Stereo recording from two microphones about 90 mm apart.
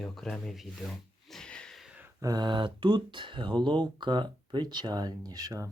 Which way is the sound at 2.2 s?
50° right (ahead or behind).